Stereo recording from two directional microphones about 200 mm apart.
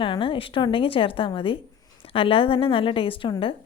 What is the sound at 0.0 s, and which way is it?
A woman's voice, 25° left (ahead or behind).